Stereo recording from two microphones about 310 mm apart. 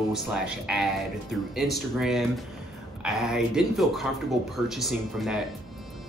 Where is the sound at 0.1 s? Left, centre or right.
Centre.